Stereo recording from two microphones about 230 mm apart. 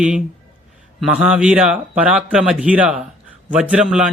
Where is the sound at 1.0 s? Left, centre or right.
Centre.